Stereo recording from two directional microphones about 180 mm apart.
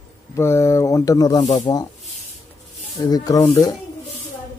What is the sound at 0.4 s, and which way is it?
Mantra, 15° left (ahead or behind).